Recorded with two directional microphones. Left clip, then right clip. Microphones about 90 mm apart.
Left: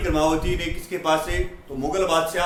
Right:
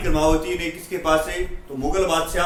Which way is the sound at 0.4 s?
30° left (ahead or behind).